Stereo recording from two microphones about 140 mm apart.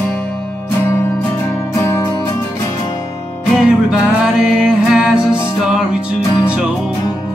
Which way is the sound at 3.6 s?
5° right (ahead or behind).